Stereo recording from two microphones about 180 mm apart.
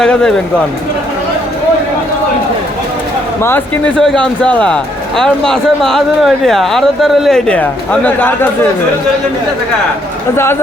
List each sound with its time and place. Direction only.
0.0 s speech: 5° left (ahead or behind)
3.4 s speech: 5° left (ahead or behind)
10.3 s speech: 15° left (ahead or behind)